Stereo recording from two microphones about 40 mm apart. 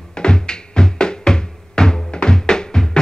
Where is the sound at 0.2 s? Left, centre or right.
Centre.